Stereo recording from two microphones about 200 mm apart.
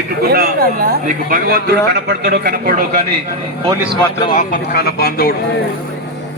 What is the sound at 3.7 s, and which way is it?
Speech, 20° right (ahead or behind).